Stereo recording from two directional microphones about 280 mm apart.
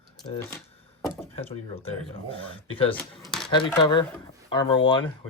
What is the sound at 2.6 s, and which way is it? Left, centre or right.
Speech, centre.